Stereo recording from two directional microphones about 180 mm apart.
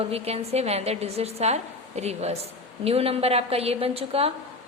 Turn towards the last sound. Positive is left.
turn(degrees=-35)  # may be behind; listen again after turning